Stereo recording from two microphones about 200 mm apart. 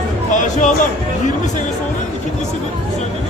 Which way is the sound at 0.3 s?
40° left (ahead or behind).